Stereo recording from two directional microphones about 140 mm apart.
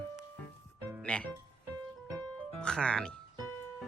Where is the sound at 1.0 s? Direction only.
10° left (ahead or behind).